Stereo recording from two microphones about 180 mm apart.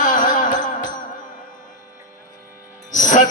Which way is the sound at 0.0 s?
45° left (ahead or behind).